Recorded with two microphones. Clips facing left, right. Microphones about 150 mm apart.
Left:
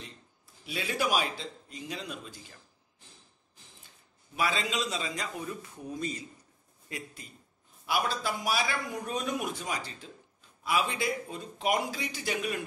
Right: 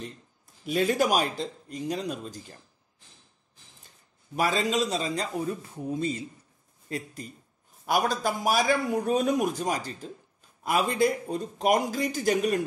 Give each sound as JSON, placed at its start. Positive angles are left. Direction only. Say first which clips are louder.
{"t": 0.7, "sound": "a man's voice", "louder": "right 7 dB", "side_deg": -45}
{"t": 4.4, "sound": "a man's voice", "louder": "right 5 dB", "side_deg": -40}
{"t": 7.8, "sound": "a man's voice", "louder": "right 5 dB", "side_deg": -45}